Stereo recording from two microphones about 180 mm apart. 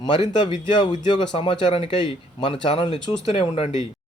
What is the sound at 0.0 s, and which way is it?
Speech, 25° left (ahead or behind).